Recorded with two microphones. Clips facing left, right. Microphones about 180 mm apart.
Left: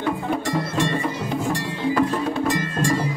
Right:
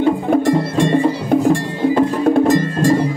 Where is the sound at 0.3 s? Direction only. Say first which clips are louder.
Right 9 dB; 55° right (ahead or behind).